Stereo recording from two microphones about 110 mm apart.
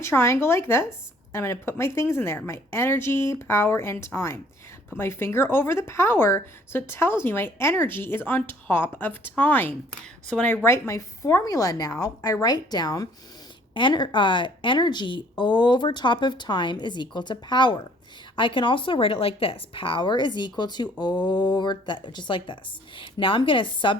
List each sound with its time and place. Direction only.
0.0 s a woman's voice: 25° left (ahead or behind); by 24.0 s 50° left (ahead or behind)